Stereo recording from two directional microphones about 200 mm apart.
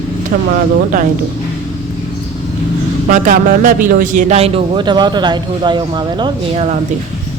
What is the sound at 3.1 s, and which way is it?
A man's voice, 45° right (ahead or behind).